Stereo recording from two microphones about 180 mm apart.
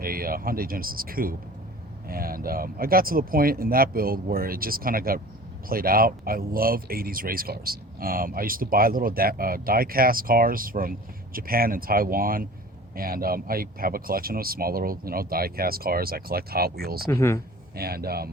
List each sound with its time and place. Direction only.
0.0 s speech: 55° right (ahead or behind)
17.1 s speech: 15° left (ahead or behind)
17.7 s speech: 60° right (ahead or behind)